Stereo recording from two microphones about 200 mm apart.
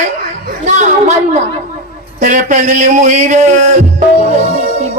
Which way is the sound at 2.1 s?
40° right (ahead or behind).